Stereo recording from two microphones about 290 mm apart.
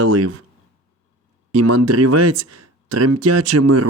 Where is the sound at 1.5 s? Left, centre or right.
Right.